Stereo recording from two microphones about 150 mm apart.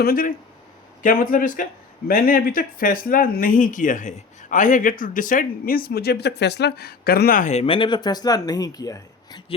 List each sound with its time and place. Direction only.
0.0 s speech: 75° left (ahead or behind)
7.5 s speech: 40° left (ahead or behind)